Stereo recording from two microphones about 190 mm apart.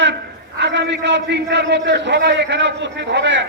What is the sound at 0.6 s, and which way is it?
A man's voice, 65° right (ahead or behind).